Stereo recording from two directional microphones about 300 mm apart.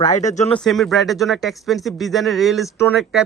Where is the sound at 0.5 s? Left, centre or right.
Centre.